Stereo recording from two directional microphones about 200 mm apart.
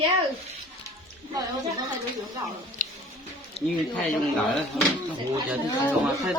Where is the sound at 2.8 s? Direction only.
40° left (ahead or behind).